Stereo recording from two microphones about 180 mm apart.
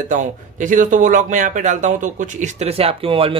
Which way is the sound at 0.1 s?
45° right (ahead or behind).